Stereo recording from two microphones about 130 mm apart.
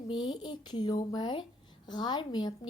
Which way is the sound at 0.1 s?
35° left (ahead or behind).